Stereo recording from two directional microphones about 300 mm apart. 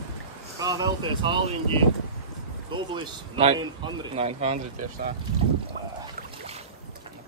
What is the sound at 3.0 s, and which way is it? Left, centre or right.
A man's voice, centre.